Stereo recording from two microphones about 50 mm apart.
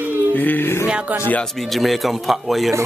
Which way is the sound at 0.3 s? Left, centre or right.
Left.